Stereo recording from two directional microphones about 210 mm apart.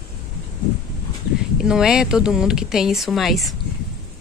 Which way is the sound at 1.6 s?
5° right (ahead or behind).